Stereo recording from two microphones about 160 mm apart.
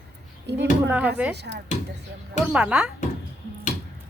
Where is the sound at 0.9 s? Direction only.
10° right (ahead or behind).